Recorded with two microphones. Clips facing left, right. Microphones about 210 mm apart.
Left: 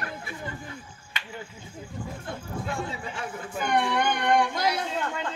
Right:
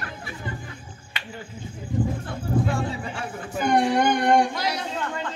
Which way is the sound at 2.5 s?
40° right (ahead or behind).